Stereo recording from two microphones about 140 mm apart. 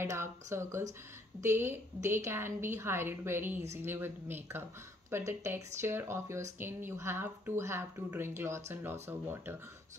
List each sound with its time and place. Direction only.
0.0 s speech: 20° right (ahead or behind)